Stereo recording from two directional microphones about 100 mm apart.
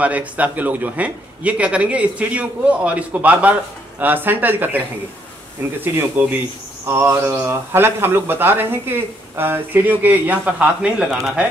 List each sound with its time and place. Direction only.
0.0 s a man's voice: 15° right (ahead or behind)
6.2 s speech: 20° right (ahead or behind)